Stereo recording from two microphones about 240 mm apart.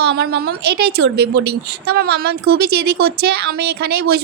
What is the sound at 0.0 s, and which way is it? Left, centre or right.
A woman's voice, right.